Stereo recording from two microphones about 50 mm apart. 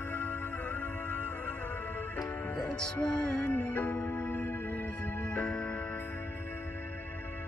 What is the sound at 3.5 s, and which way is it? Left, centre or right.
Music, left.